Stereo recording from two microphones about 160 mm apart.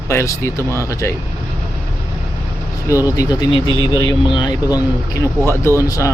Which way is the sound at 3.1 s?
25° left (ahead or behind).